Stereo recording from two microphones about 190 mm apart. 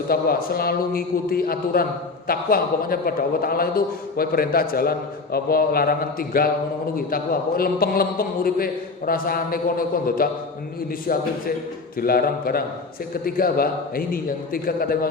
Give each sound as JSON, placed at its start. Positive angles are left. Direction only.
{"t": 0.1, "sound": "a man's voice", "side_deg": 50}